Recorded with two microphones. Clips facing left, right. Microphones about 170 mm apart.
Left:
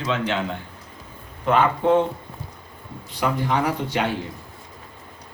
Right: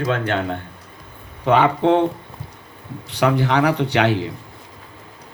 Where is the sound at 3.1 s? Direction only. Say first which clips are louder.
Right 5 dB; 75° right (ahead or behind).